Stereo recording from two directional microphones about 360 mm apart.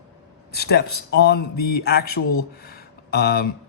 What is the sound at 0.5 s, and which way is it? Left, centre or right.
Speech, left.